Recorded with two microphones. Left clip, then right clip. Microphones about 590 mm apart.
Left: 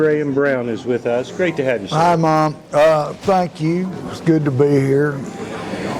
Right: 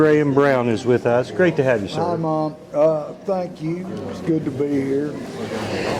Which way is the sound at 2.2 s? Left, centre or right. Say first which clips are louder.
Left 7 dB; left.